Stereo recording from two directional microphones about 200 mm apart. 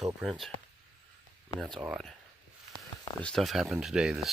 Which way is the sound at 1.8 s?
5° right (ahead or behind).